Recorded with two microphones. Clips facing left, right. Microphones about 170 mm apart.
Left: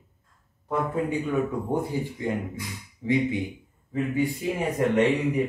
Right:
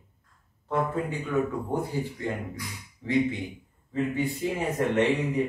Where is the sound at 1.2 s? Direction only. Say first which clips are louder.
Left 1 dB; 20° left (ahead or behind).